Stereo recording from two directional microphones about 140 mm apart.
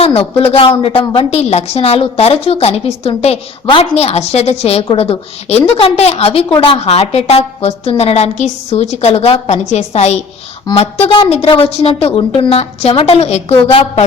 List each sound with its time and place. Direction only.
0.0 s a woman's voice: 45° left (ahead or behind)